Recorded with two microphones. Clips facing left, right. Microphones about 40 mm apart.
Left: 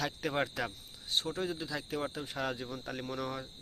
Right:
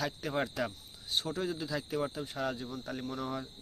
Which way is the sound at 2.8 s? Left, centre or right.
Left.